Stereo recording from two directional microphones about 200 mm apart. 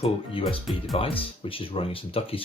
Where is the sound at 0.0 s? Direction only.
30° left (ahead or behind).